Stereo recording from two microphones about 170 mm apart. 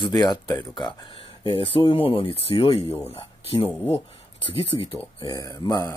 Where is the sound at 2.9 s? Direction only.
10° left (ahead or behind).